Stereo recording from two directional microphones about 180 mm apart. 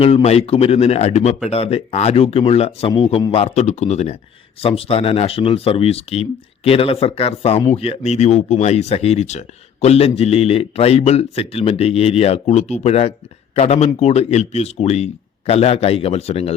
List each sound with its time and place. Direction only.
0.0 s speech: 35° left (ahead or behind)